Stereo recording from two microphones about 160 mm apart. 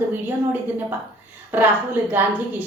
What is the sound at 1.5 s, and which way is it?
Speech, 10° right (ahead or behind).